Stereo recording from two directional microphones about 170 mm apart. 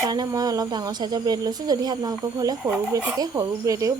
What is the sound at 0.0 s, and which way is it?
Speech, 25° right (ahead or behind).